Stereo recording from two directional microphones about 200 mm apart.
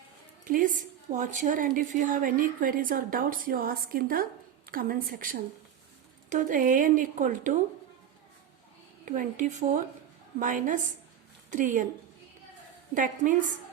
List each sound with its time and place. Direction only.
0.4 s a woman's voice: 40° right (ahead or behind)
9.0 s speech: 40° right (ahead or behind)
12.9 s speech: 40° right (ahead or behind)